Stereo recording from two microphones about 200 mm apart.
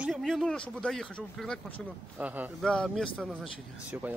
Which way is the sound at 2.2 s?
10° right (ahead or behind).